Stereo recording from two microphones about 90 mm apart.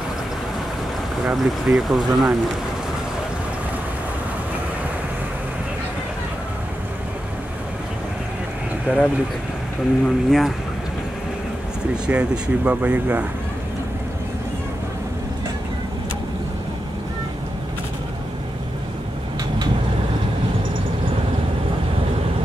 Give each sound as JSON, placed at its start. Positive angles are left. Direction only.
{"t": 1.2, "sound": "speech", "side_deg": -5}
{"t": 8.9, "sound": "speech", "side_deg": -10}
{"t": 10.0, "sound": "speech", "side_deg": 0}
{"t": 12.1, "sound": "speech", "side_deg": -10}